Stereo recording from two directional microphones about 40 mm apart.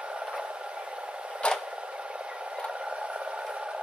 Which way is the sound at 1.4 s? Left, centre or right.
Left.